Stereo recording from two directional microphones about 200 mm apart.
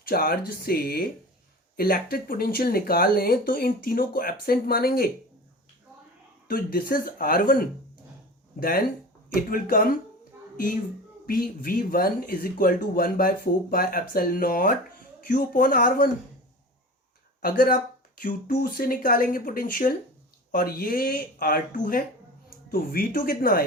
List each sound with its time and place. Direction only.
0.0 s speech: 50° left (ahead or behind)
6.5 s speech: 45° left (ahead or behind)
11.3 s speech: 45° left (ahead or behind)
17.4 s speech: 45° left (ahead or behind)